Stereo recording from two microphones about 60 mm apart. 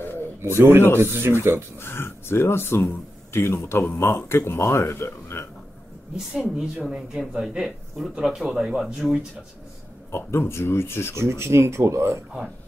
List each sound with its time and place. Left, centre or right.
0.4 s speech: right
1.8 s speech: left
5.0 s speech: left
6.1 s speech: centre
10.1 s speech: left
11.1 s speech: right